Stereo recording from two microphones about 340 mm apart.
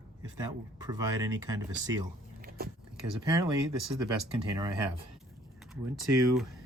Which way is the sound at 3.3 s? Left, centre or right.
Centre.